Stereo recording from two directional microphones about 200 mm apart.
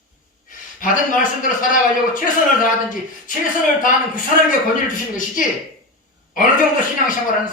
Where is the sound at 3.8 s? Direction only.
40° left (ahead or behind).